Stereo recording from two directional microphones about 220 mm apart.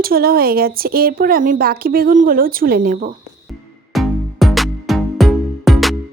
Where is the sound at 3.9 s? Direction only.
Centre (ahead or behind).